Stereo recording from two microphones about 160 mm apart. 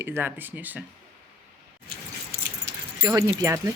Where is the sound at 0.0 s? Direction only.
10° right (ahead or behind).